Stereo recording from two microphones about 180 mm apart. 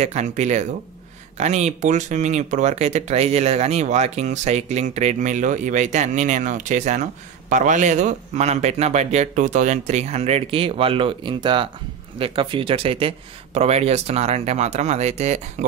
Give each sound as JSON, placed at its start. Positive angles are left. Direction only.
{"t": 0.0, "sound": "speech", "side_deg": -40}